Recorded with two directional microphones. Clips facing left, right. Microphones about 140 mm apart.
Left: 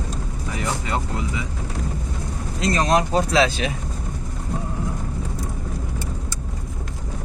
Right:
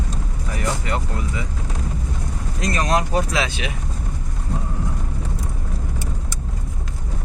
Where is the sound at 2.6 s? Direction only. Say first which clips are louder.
Left 2 dB; 25° left (ahead or behind).